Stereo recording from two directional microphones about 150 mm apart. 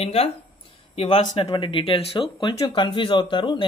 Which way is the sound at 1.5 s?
35° left (ahead or behind).